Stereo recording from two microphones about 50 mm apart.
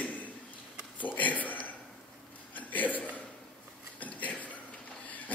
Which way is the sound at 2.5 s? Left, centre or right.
Left.